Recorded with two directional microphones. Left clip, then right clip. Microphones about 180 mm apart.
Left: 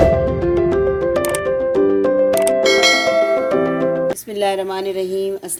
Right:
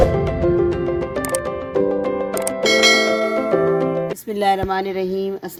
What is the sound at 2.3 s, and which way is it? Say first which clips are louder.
Music: left 4 dB; centre (ahead or behind).